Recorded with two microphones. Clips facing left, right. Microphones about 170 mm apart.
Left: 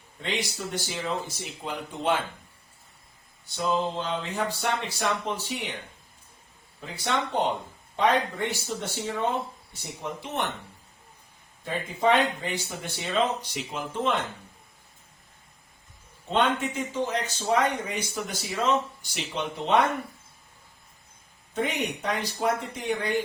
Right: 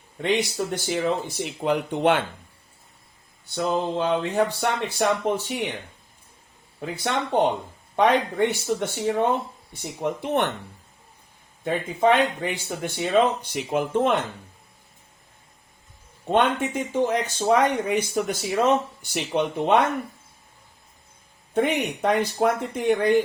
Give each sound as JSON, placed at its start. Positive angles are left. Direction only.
{"t": 0.2, "sound": "speech", "side_deg": -60}
{"t": 3.5, "sound": "speech", "side_deg": -60}
{"t": 6.7, "sound": "speech", "side_deg": -60}
{"t": 11.6, "sound": "speech", "side_deg": -55}
{"t": 16.3, "sound": "speech", "side_deg": -55}
{"t": 21.5, "sound": "speech", "side_deg": -60}